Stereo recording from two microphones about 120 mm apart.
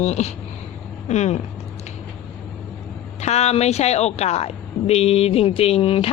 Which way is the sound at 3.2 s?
65° left (ahead or behind).